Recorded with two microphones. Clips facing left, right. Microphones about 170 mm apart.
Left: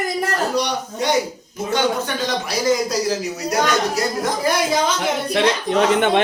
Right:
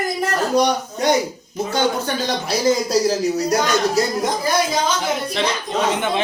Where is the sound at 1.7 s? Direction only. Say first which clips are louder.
Left 1 dB; 35° right (ahead or behind).